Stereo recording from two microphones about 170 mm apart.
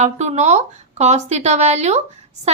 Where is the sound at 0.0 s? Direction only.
40° right (ahead or behind).